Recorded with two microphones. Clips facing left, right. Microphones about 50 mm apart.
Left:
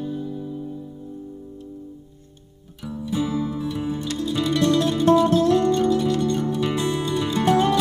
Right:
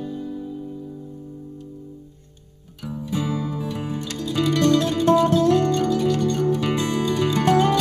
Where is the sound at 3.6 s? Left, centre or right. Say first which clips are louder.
Left 2 dB; right.